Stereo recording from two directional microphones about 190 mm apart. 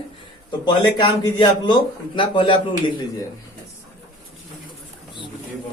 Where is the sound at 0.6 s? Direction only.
25° left (ahead or behind).